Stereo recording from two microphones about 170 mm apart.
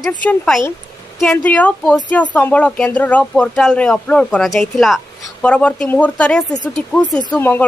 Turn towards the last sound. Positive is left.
turn(degrees=10)  # may be behind; listen again after turning